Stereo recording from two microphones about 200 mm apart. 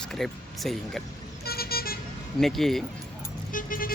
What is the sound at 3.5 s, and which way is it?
Speech, 45° left (ahead or behind).